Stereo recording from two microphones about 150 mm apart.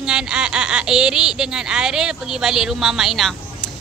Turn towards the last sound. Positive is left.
turn(degrees=0)  # may be behind; listen again after turning